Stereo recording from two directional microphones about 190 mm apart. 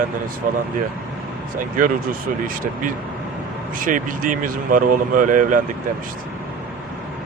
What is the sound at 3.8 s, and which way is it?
Speech, 45° right (ahead or behind).